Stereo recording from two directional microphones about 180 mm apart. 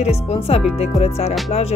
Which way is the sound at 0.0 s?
35° left (ahead or behind).